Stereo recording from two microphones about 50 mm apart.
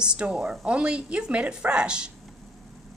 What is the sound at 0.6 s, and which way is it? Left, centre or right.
Speech, right.